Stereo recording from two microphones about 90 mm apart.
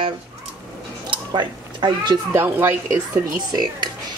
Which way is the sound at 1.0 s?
60° right (ahead or behind).